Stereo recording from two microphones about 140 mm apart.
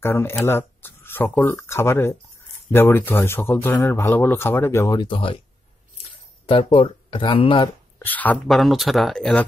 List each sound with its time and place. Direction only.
0.0 s speech: 15° left (ahead or behind)
5.0 s speech: 40° left (ahead or behind)
6.4 s speech: 40° left (ahead or behind)
8.0 s speech: 10° left (ahead or behind)
8.5 s speech: centre (ahead or behind)